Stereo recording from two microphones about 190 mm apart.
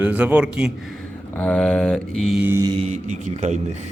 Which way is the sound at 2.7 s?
35° right (ahead or behind).